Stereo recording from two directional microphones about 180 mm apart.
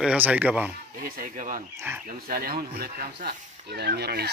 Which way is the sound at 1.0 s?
45° right (ahead or behind).